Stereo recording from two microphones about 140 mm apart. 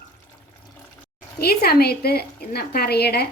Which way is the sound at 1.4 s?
90° left.